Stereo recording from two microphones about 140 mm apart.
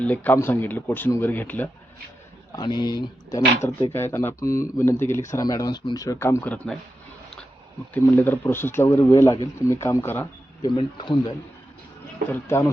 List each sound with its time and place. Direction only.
0.0 s speech: 10° left (ahead or behind)
2.6 s speech: 30° left (ahead or behind); by 6.7 s 10° left (ahead or behind)
7.9 s speech: 15° left (ahead or behind)
10.6 s speech: 35° left (ahead or behind)
12.3 s speech: 20° left (ahead or behind)